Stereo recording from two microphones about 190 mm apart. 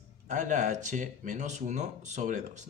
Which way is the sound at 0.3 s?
40° right (ahead or behind).